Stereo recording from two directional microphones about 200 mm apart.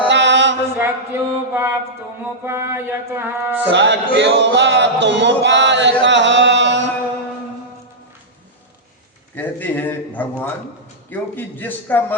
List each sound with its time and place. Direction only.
0.1 s mantra: 65° right (ahead or behind)
0.8 s mantra: 10° right (ahead or behind)
3.7 s music: 60° right (ahead or behind)
6.1 s chant: 65° right (ahead or behind)
9.3 s a man's voice: 10° left (ahead or behind)